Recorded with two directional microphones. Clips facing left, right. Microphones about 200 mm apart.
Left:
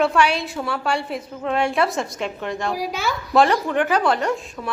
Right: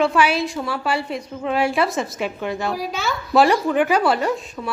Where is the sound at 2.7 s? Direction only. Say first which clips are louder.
Even; 10° left (ahead or behind).